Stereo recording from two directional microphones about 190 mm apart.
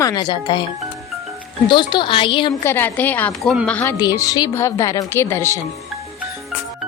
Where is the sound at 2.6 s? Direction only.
10° left (ahead or behind).